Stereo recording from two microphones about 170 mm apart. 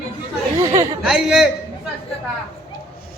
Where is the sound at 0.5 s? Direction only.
15° right (ahead or behind).